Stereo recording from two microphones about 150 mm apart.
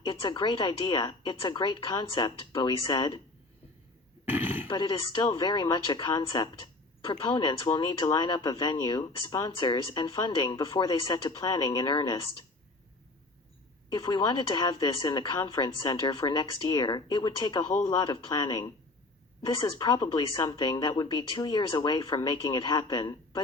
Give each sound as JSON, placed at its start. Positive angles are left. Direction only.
{"t": 0.0, "sound": "a woman's voice", "side_deg": 30}
{"t": 4.3, "sound": "a sound", "side_deg": -15}
{"t": 4.7, "sound": "speech", "side_deg": 30}
{"t": 13.9, "sound": "speech", "side_deg": 30}